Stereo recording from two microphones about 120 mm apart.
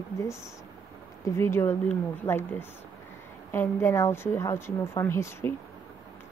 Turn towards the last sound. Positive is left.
turn(degrees=20)  # may be behind; listen again after turning